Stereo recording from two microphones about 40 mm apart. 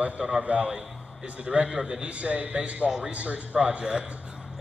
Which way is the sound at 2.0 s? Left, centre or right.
Right.